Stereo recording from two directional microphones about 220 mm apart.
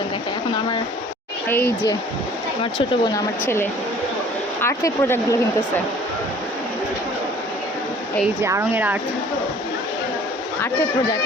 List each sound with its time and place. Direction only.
1.5 s speech: 10° left (ahead or behind)
2.7 s speech: 20° left (ahead or behind)
8.4 s speech: 15° right (ahead or behind)